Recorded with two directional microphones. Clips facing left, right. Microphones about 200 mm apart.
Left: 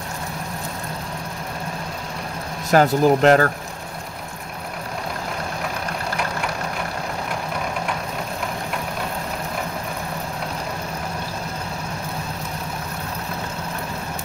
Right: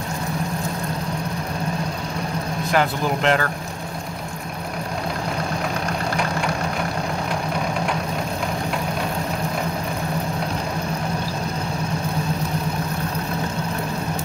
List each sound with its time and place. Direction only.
2.7 s speech: 40° left (ahead or behind)